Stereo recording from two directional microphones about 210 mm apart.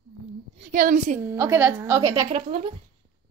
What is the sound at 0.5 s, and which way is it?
Speech, 35° right (ahead or behind).